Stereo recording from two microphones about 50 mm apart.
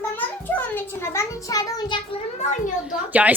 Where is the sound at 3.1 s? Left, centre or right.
Right.